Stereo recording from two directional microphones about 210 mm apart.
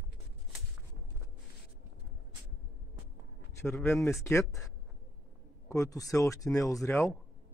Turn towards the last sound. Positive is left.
turn(degrees=15)  # may be behind; listen again after turning